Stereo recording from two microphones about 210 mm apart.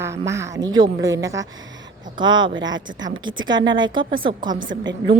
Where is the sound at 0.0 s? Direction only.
15° right (ahead or behind).